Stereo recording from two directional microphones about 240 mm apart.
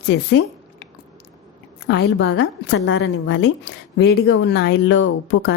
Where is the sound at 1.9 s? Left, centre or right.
Left.